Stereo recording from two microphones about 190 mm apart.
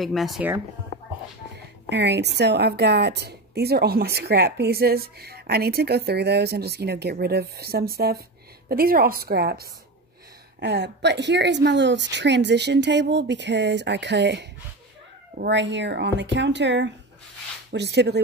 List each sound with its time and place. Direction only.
0.0 s speech: centre (ahead or behind)
1.9 s a woman's voice: 60° right (ahead or behind)